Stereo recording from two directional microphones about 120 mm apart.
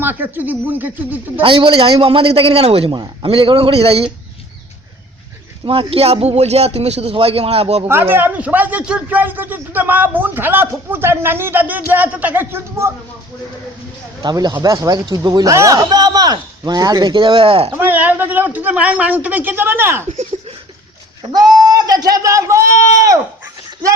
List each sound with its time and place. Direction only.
0.0 s a man's voice: 15° right (ahead or behind)
1.4 s a man's voice: 45° right (ahead or behind)
2.9 s a man's voice: 40° right (ahead or behind)
5.6 s a man's voice: 50° right (ahead or behind)
7.9 s a man's voice: 20° right (ahead or behind)
14.2 s speech: 35° right (ahead or behind)
17.7 s a man's voice: 15° right (ahead or behind)
21.2 s speech: 35° right (ahead or behind)